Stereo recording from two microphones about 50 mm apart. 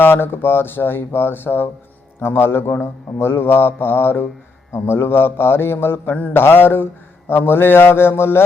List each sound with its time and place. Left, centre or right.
0.0 s speech: left